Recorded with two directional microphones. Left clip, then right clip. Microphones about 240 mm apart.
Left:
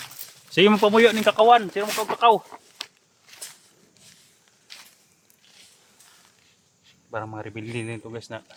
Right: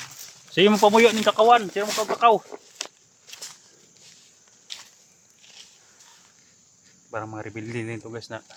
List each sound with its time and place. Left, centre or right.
0.5 s speech: centre
2.1 s speech: centre
4.7 s walk: centre
7.1 s speech: centre